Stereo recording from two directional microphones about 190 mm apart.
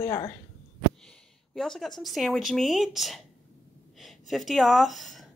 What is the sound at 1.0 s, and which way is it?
Speech, centre (ahead or behind).